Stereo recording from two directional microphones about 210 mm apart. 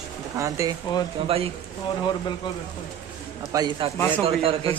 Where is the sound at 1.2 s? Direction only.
30° right (ahead or behind).